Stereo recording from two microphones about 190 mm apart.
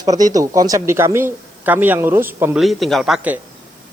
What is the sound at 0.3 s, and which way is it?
Speech, 20° right (ahead or behind).